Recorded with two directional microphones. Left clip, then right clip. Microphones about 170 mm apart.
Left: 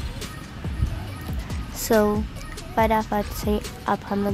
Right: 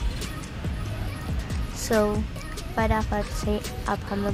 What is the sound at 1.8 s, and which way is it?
Speech, 30° left (ahead or behind).